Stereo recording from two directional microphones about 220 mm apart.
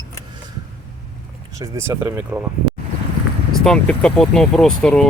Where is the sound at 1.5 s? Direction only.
15° right (ahead or behind).